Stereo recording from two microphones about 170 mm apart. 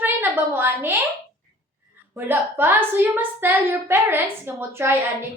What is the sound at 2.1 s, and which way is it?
A child's voice, 10° right (ahead or behind).